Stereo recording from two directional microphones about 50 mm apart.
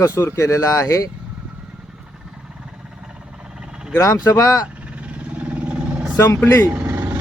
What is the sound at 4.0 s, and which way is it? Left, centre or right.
Speech, left.